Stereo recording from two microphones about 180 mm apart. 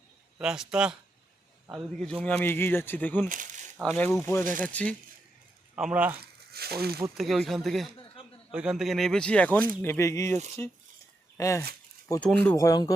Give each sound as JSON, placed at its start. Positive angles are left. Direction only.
{"t": 0.3, "sound": "speech", "side_deg": -5}
{"t": 2.2, "sound": "speech", "side_deg": 10}
{"t": 3.2, "sound": "speech", "side_deg": -45}
{"t": 3.8, "sound": "speech", "side_deg": 5}
{"t": 4.4, "sound": "speech", "side_deg": -50}
{"t": 4.7, "sound": "speech", "side_deg": 10}
{"t": 5.7, "sound": "speech", "side_deg": -5}
{"t": 6.1, "sound": "speech", "side_deg": -60}
{"t": 7.2, "sound": "speech", "side_deg": 0}
{"t": 7.9, "sound": "a sound", "side_deg": 30}
{"t": 8.5, "sound": "speech", "side_deg": -5}